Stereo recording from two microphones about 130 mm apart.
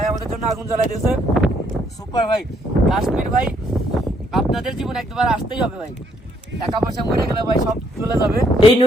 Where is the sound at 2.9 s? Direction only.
Centre (ahead or behind).